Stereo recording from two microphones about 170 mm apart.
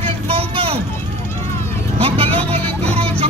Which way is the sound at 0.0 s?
35° right (ahead or behind).